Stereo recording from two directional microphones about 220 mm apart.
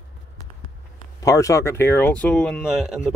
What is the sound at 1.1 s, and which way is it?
Speech, 15° left (ahead or behind).